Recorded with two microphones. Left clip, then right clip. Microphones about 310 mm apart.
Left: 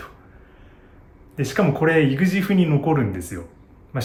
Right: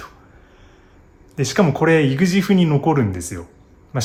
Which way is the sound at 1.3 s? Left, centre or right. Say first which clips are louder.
Right 3 dB; centre.